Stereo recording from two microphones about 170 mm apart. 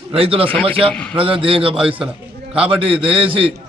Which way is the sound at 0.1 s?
35° right (ahead or behind).